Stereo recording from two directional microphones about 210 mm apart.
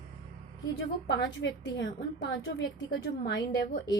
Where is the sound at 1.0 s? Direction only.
55° left (ahead or behind).